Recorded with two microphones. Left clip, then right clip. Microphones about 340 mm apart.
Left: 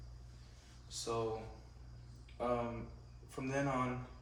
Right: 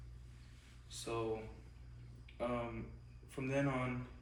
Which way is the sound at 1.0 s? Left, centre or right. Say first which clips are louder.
Left 3 dB; centre.